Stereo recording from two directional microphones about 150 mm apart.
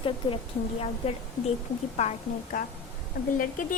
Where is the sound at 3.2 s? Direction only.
75° left (ahead or behind).